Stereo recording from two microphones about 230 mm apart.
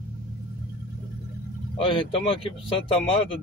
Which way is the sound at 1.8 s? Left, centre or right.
Left.